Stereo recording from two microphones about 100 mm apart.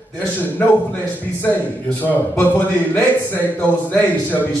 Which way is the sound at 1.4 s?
20° left (ahead or behind).